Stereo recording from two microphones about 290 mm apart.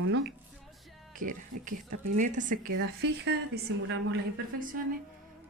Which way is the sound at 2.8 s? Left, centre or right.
Right.